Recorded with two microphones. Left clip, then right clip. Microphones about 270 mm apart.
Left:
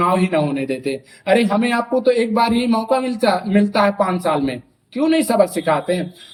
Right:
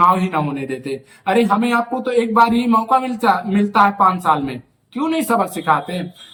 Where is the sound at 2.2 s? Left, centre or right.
Right.